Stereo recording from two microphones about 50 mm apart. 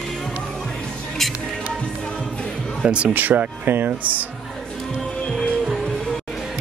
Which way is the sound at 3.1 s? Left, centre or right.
Right.